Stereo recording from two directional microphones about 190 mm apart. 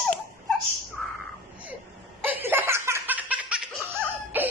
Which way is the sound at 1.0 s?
Centre (ahead or behind).